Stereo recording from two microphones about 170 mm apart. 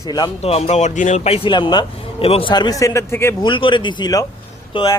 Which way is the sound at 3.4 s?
30° left (ahead or behind).